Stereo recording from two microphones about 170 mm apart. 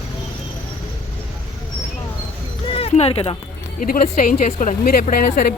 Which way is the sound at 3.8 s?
60° left (ahead or behind).